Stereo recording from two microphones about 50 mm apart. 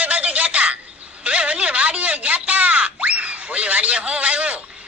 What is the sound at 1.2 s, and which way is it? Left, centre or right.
Speech, right.